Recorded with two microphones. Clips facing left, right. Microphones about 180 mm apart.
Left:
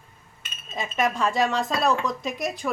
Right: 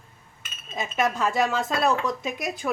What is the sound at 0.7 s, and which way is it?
Speech, centre (ahead or behind).